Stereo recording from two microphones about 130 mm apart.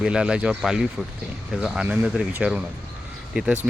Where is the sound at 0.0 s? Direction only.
5° right (ahead or behind).